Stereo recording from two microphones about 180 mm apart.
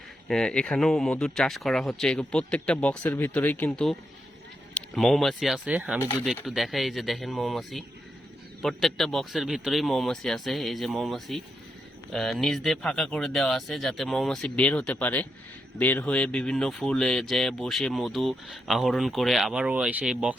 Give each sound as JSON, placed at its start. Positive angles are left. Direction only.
{"t": 0.3, "sound": "speech", "side_deg": 5}
{"t": 6.0, "sound": "speech", "side_deg": 15}
{"t": 6.2, "sound": "speech", "side_deg": 0}